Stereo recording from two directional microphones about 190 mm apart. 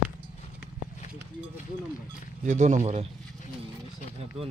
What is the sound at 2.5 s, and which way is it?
Speech, 40° right (ahead or behind).